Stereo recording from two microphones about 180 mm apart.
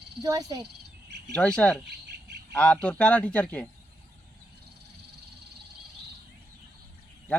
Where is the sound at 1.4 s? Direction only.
5° left (ahead or behind).